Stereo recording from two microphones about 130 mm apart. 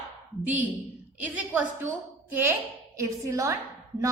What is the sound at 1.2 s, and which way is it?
Speech, 10° right (ahead or behind).